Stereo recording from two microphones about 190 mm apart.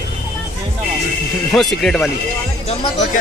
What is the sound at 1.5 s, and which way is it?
Speech, centre (ahead or behind).